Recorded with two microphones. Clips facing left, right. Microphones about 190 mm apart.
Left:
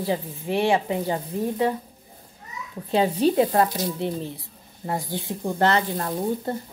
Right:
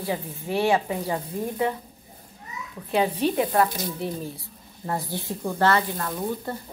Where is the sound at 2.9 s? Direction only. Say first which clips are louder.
Left 3 dB; 30° left (ahead or behind).